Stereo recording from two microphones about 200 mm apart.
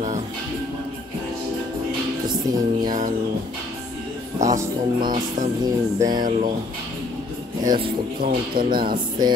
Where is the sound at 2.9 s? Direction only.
40° right (ahead or behind).